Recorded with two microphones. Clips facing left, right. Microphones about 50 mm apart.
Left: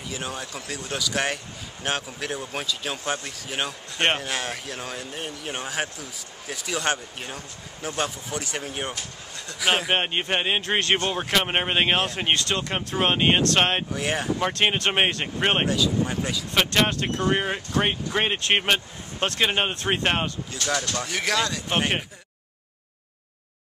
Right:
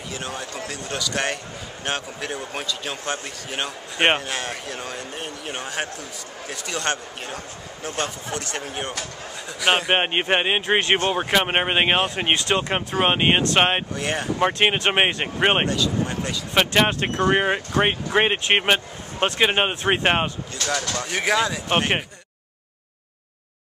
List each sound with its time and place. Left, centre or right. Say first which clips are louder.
0.1 s speech: right 1 dB; centre
9.9 s speech: right 4 dB; right
13.9 s speech: right 1 dB; centre
14.4 s speech: right 5 dB; centre
15.6 s speech: even; centre
16.5 s speech: right 3 dB; centre